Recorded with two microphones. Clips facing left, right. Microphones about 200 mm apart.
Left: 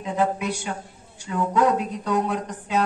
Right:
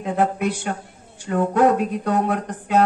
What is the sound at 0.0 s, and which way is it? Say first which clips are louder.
Speech: right 3 dB; 55° right (ahead or behind).